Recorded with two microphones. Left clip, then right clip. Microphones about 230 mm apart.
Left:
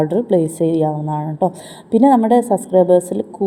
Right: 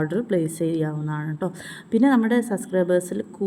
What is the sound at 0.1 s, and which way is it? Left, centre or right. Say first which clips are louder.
Speech: left 8 dB; centre.